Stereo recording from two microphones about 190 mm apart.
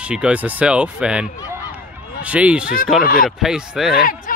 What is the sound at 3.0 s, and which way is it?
Speech, 50° left (ahead or behind).